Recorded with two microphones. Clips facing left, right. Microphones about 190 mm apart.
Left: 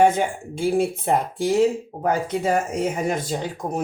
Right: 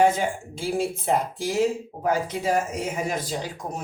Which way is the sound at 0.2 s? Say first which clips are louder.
Left 4 dB; 55° left (ahead or behind).